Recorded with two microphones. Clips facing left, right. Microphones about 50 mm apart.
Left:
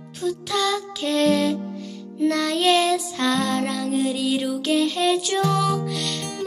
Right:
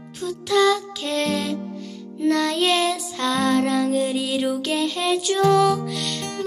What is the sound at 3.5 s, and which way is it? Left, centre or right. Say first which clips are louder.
Music: right 5 dB; centre.